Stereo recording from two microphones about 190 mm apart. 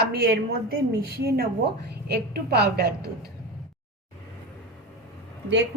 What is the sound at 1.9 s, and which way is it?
A woman's voice, 60° right (ahead or behind).